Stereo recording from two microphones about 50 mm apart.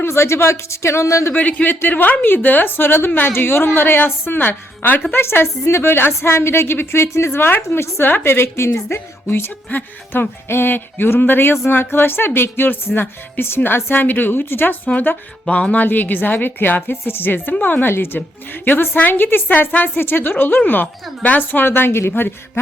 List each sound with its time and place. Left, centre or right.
0.0 s speech: left
1.3 s a woman's voice: left
15.4 s a woman's voice: left
18.6 s a woman's voice: left
20.0 s a woman's voice: left
20.8 s a woman's voice: left
21.3 s a woman's voice: left
21.7 s a woman's voice: left